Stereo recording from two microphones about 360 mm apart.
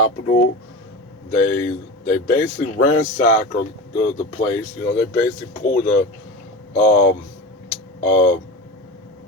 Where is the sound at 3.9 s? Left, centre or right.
Left.